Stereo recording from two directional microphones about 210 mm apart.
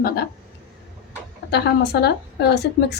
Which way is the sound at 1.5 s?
50° left (ahead or behind).